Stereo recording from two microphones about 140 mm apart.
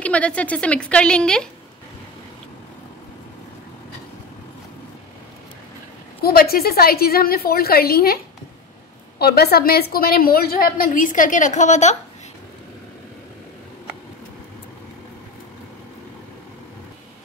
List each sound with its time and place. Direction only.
0.0 s a woman's voice: 10° left (ahead or behind)
6.2 s a woman's voice: 90° left
9.2 s a woman's voice: 90° left; by 12.0 s 60° left (ahead or behind)